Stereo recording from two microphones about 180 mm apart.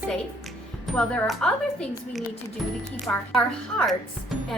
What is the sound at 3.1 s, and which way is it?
Speech, 15° left (ahead or behind).